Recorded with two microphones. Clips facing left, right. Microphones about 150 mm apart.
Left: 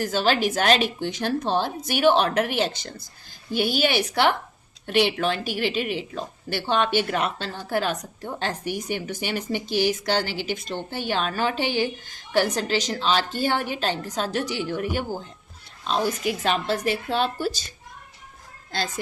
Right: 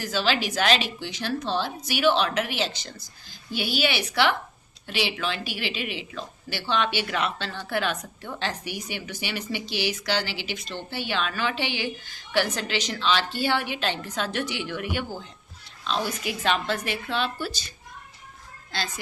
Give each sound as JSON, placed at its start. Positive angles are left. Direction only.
{"t": 0.0, "sound": "a woman's voice", "side_deg": 50}
{"t": 18.7, "sound": "a woman's voice", "side_deg": 45}